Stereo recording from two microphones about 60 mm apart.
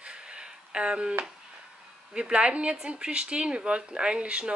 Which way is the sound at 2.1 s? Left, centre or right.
Centre.